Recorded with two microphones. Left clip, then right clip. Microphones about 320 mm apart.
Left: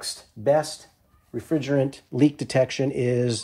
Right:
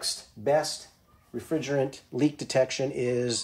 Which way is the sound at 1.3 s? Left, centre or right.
Left.